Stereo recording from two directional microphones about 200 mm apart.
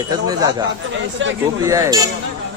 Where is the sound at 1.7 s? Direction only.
15° right (ahead or behind).